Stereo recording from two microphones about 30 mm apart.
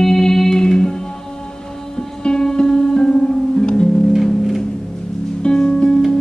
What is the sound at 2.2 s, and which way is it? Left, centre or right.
Music, left.